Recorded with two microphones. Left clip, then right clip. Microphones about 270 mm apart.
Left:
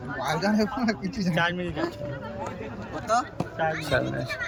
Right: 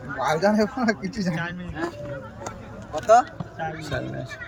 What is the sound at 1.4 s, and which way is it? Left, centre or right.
Speech, left.